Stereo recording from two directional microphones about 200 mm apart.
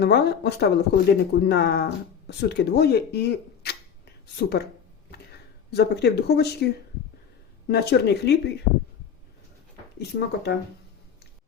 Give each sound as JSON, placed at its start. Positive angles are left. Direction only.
{"t": 0.0, "sound": "speech", "side_deg": 55}
{"t": 5.7, "sound": "speech", "side_deg": 55}
{"t": 7.7, "sound": "speech", "side_deg": 55}
{"t": 10.0, "sound": "speech", "side_deg": 55}